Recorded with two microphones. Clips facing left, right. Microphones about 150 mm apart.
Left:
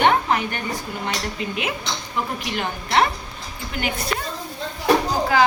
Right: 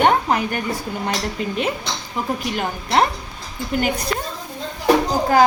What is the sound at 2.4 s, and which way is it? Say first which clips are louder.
Speech: right 3 dB; 45° right (ahead or behind).